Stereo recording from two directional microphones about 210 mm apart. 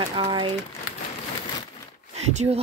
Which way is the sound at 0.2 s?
25° right (ahead or behind).